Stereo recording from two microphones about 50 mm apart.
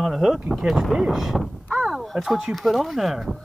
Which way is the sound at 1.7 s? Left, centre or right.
Centre.